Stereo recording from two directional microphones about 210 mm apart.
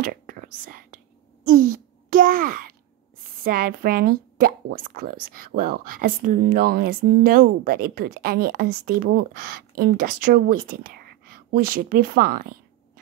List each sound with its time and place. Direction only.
0.0 s whispering: 40° right (ahead or behind)
3.4 s speech: 45° right (ahead or behind)